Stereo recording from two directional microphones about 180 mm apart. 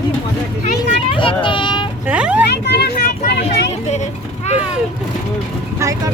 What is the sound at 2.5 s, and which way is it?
Vehicle, 70° left (ahead or behind).